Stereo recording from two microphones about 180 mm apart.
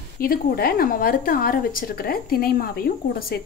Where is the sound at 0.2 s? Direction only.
55° left (ahead or behind).